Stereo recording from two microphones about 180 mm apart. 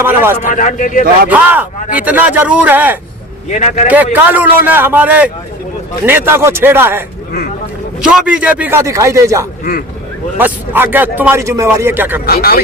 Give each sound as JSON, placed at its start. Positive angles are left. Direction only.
{"t": 0.0, "sound": "a man's voice", "side_deg": -15}
{"t": 0.3, "sound": "speech", "side_deg": 45}
{"t": 1.3, "sound": "a man's voice", "side_deg": -10}
{"t": 3.5, "sound": "speech", "side_deg": 45}
{"t": 3.8, "sound": "a man's voice", "side_deg": -10}
{"t": 8.0, "sound": "a man's voice", "side_deg": -5}
{"t": 12.2, "sound": "speech", "side_deg": 55}